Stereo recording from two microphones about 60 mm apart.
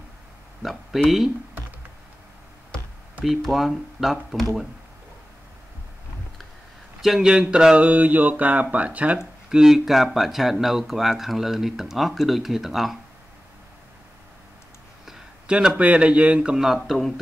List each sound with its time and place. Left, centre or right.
0.6 s speech: centre
3.3 s speech: centre
7.0 s a sound: centre; by 9.2 s right
9.5 s speech: centre
15.4 s speech: centre
15.8 s a sound: right
16.5 s speech: centre